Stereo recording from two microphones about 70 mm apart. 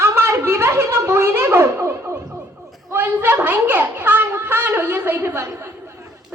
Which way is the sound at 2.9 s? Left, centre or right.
Right.